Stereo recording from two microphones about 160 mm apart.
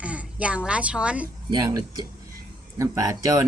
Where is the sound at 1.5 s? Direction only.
25° right (ahead or behind).